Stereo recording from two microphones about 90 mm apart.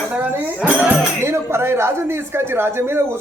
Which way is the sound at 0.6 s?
15° right (ahead or behind).